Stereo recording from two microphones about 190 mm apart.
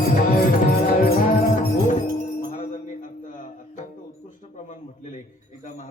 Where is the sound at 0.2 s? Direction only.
50° left (ahead or behind).